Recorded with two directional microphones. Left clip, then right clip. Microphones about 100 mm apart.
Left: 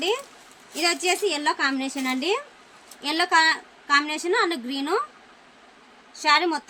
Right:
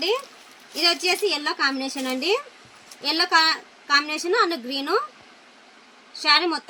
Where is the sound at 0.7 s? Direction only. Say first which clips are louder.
Right 2 dB; 40° left (ahead or behind).